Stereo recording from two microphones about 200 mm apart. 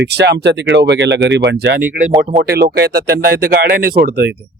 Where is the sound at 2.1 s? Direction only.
35° right (ahead or behind).